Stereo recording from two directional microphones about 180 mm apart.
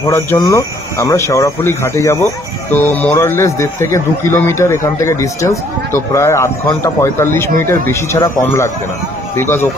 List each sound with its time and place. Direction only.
0.0 s speech: 20° left (ahead or behind)